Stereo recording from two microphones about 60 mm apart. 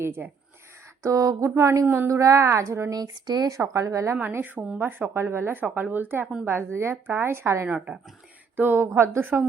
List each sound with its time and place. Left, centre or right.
0.0 s speech: right
1.0 s a sound: right
1.5 s speech: right
2.9 s speech: right
3.7 s speech: right
4.2 s speech: right
5.6 s a woman's voice: right
8.5 s speech: right